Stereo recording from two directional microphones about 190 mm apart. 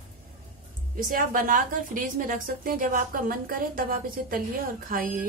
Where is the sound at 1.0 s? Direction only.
45° right (ahead or behind).